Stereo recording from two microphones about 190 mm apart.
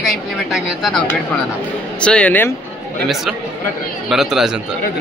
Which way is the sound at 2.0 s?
5° left (ahead or behind).